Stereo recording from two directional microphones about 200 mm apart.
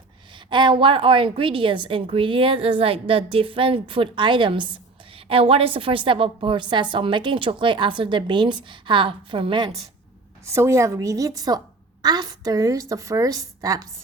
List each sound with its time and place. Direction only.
0.3 s a woman's voice: 25° right (ahead or behind)